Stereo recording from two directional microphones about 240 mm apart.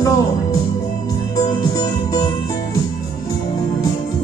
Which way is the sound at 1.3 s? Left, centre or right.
Centre.